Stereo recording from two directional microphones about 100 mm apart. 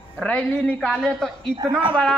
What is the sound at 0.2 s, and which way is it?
A woman's voice, 10° left (ahead or behind).